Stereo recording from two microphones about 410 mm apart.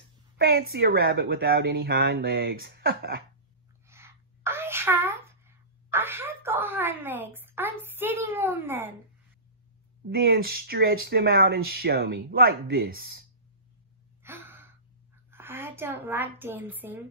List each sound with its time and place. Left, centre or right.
0.4 s speech: right
3.8 s sneeze: centre
10.0 s speech: right
14.2 s gasp: centre
15.3 s a woman's voice: centre